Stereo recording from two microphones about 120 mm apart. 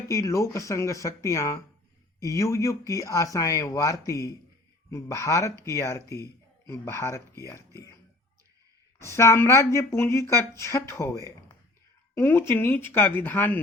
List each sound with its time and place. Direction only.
0.1 s speech: 25° left (ahead or behind)
9.0 s speech: 25° left (ahead or behind)